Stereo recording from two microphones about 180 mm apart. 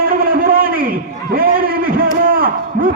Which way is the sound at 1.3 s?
55° right (ahead or behind).